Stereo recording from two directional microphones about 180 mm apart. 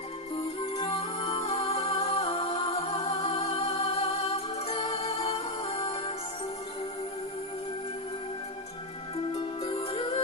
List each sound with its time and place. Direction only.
0.6 s music: 30° left (ahead or behind)
9.6 s music: 30° left (ahead or behind)